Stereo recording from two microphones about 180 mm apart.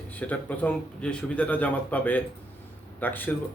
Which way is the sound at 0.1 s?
10° left (ahead or behind).